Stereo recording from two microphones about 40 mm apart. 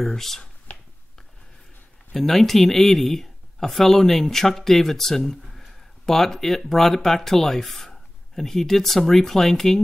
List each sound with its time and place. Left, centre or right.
0.0 s speech: centre
2.1 s speech: centre